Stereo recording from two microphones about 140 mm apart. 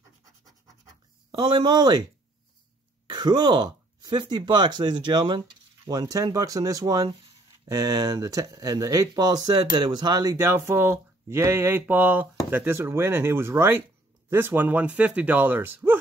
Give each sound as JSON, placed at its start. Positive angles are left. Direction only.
{"t": 1.3, "sound": "speech", "side_deg": -35}
{"t": 3.1, "sound": "speech", "side_deg": -30}